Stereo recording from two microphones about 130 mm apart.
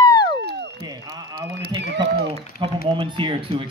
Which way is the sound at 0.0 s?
35° left (ahead or behind).